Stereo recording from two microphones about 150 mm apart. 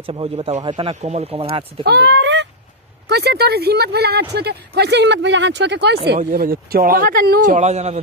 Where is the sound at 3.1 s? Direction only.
90° right.